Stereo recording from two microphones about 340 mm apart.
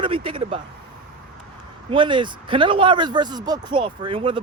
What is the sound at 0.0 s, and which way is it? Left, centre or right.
Speech, centre.